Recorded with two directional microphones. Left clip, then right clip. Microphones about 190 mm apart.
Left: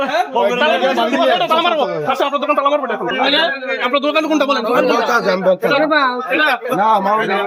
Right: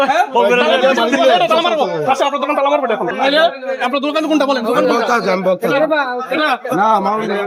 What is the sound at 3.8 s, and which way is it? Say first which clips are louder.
Speech: left 1 dB; 45° right (ahead or behind).